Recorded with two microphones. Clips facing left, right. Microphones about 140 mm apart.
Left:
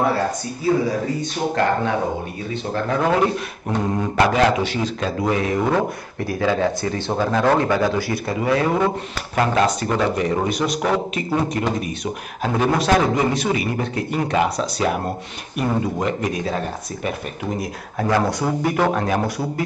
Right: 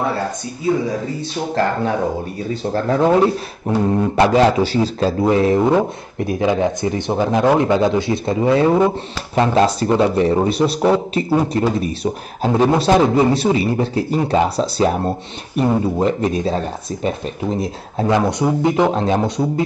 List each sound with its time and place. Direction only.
1.5 s a man's voice: 35° right (ahead or behind)
3.1 s speech: 20° right (ahead or behind)
4.2 s a man's voice: 30° right (ahead or behind)
5.7 s a man's voice: 20° right (ahead or behind)